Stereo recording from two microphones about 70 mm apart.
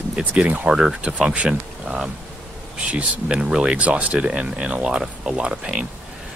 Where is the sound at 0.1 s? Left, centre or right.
Centre.